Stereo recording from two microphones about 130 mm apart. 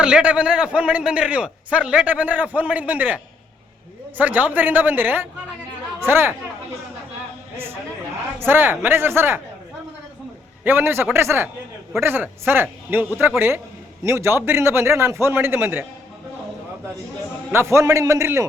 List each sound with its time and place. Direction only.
0.0 s a man's voice: 10° right (ahead or behind)
4.2 s a man's voice: 10° right (ahead or behind)
8.4 s a man's voice: 15° right (ahead or behind)
10.6 s a man's voice: 15° right (ahead or behind)
17.5 s a man's voice: 20° right (ahead or behind)